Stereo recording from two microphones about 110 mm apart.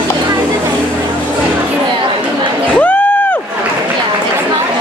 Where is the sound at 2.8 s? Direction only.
15° left (ahead or behind).